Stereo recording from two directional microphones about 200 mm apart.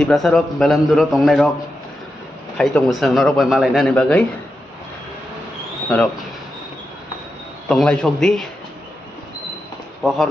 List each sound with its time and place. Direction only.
0.0 s a man's voice: centre (ahead or behind)
2.5 s a man's voice: 5° left (ahead or behind)
7.7 s a man's voice: 5° left (ahead or behind)
10.0 s a man's voice: centre (ahead or behind)